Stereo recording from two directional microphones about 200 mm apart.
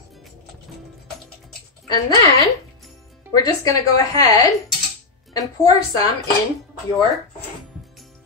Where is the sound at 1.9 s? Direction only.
20° left (ahead or behind).